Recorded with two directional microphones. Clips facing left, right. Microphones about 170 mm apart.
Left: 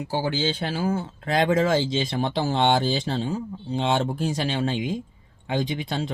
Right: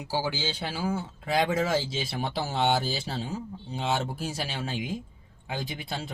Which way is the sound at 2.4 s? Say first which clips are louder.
Left 4 dB; 90° left.